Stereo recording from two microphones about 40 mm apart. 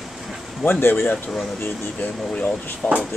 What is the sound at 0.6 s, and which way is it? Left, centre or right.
Speech, left.